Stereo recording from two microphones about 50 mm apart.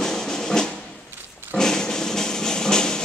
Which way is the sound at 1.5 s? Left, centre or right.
Centre.